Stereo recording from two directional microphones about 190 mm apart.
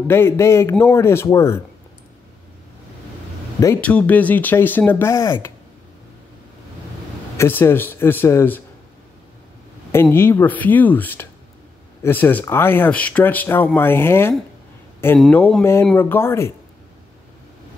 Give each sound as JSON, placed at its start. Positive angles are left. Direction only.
{"t": 0.1, "sound": "speech", "side_deg": 15}
{"t": 3.5, "sound": "speech", "side_deg": 15}
{"t": 7.3, "sound": "speech", "side_deg": 10}
{"t": 9.9, "sound": "speech", "side_deg": 10}